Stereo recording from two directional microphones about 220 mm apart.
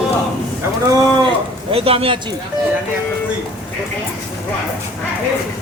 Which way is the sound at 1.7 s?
25° right (ahead or behind).